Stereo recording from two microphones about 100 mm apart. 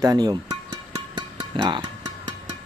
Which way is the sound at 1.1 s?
45° right (ahead or behind).